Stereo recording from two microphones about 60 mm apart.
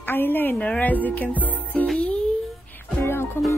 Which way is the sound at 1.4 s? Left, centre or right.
Left.